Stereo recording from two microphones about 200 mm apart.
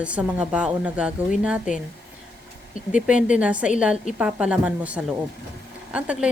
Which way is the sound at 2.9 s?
5° right (ahead or behind).